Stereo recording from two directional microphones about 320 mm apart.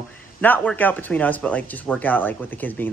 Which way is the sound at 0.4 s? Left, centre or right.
Centre.